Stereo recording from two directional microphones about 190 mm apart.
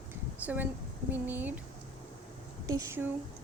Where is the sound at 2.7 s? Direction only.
15° right (ahead or behind).